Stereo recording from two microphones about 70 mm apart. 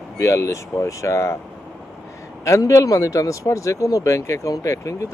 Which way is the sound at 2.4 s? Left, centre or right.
Left.